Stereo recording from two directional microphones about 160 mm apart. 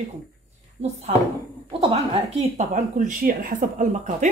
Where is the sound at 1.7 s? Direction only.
35° right (ahead or behind).